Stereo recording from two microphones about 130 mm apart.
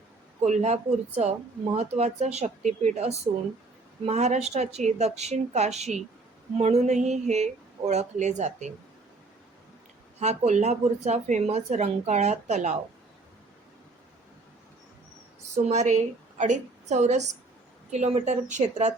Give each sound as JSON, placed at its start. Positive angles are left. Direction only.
{"t": 0.4, "sound": "speech", "side_deg": -60}
{"t": 10.2, "sound": "speech", "side_deg": -60}
{"t": 15.5, "sound": "speech", "side_deg": -60}